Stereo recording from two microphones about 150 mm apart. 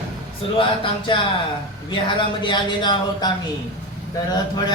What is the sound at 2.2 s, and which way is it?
Speech, 30° left (ahead or behind).